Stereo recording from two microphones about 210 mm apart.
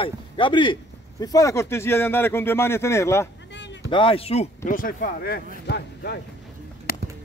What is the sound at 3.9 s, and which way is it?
Speech, 25° left (ahead or behind).